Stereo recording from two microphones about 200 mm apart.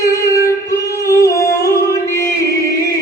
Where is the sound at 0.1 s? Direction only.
15° left (ahead or behind).